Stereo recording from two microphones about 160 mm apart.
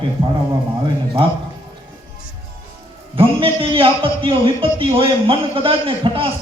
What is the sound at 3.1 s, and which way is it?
A man's voice, 35° right (ahead or behind).